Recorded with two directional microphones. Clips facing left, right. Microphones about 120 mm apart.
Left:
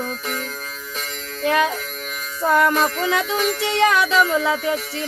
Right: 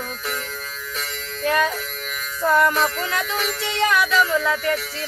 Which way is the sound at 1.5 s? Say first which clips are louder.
Left 2 dB; 10° left (ahead or behind).